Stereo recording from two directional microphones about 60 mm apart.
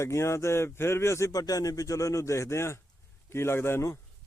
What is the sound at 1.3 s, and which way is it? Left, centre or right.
Speech, left.